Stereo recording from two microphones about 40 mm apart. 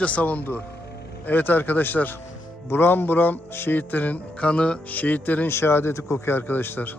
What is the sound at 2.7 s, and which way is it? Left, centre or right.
Speech, left.